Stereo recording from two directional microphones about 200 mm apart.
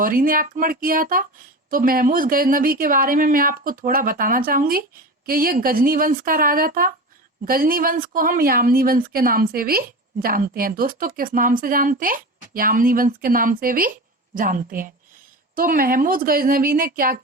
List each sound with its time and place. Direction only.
0.0 s speech: 45° right (ahead or behind)